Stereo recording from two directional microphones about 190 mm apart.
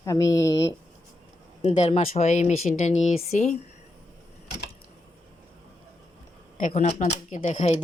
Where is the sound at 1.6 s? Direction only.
35° left (ahead or behind).